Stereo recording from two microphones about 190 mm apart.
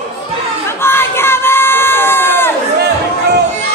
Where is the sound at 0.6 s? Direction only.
10° left (ahead or behind).